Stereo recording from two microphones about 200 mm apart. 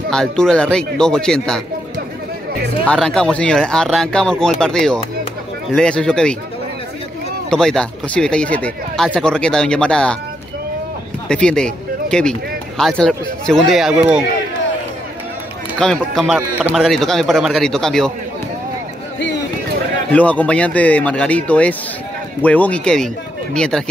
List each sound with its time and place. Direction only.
0.1 s speech: 5° left (ahead or behind)
2.8 s speech: 5° left (ahead or behind)
7.4 s speech: 5° left (ahead or behind)
11.2 s speech: 5° left (ahead or behind)
15.8 s speech: centre (ahead or behind)
19.1 s a sound: 60° left (ahead or behind)
20.1 s speech: 5° left (ahead or behind)